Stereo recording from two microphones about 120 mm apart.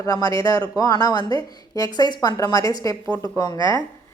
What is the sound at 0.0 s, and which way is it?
A woman's voice, 30° left (ahead or behind).